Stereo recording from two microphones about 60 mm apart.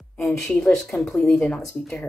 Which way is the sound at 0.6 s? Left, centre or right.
Centre.